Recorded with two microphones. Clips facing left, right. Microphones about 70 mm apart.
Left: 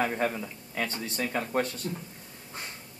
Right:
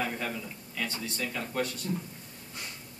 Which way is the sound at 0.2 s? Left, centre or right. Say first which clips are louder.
Left 6 dB; left.